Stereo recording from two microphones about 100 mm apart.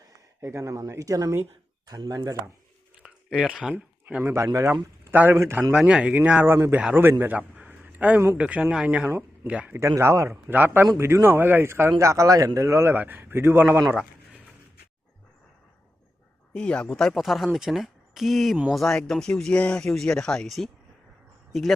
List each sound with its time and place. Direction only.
0.4 s speech: 30° right (ahead or behind)
3.0 s a sound: 5° right (ahead or behind)
4.2 s a man's voice: 25° right (ahead or behind)
5.1 s speech: 15° right (ahead or behind)
5.4 s a man's voice: 30° right (ahead or behind)
5.7 s speech: 10° right (ahead or behind)
6.4 s a man's voice: 25° right (ahead or behind)
9.0 s speech: 25° right (ahead or behind)
9.5 s speech: 15° right (ahead or behind)
9.7 s a man's voice: 30° right (ahead or behind)
16.5 s speech: 10° left (ahead or behind)